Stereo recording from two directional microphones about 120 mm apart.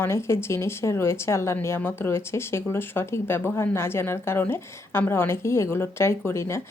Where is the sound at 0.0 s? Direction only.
20° left (ahead or behind).